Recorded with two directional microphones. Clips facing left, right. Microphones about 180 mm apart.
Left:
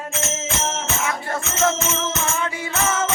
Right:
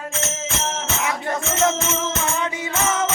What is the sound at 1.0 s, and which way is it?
Music, 20° right (ahead or behind).